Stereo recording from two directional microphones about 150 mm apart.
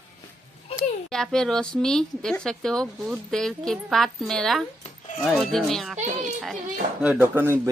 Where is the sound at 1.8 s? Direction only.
5° left (ahead or behind).